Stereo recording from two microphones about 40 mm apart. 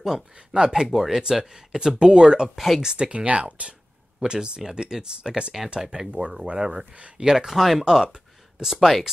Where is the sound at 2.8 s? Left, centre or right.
Right.